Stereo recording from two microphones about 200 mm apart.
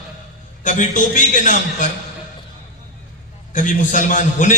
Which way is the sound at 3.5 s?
40° left (ahead or behind).